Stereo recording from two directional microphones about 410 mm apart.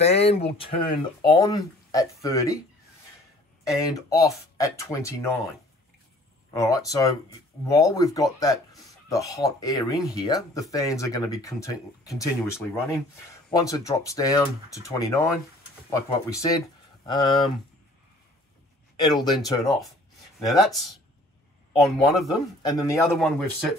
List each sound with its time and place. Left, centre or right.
0.0 s speech: centre
1.4 s speech: centre
3.6 s speech: centre
6.5 s speech: centre
18.9 s speech: centre